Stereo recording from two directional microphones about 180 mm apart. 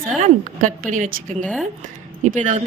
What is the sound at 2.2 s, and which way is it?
Speech, 45° right (ahead or behind).